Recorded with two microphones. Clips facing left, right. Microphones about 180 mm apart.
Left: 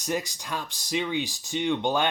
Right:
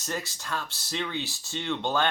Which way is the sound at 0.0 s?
15° left (ahead or behind).